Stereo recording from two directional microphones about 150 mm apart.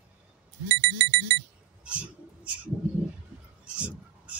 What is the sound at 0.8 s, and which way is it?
Alarm clock, 90° right.